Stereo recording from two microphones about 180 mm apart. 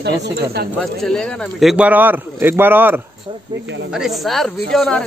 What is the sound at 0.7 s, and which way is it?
Speech, 5° left (ahead or behind).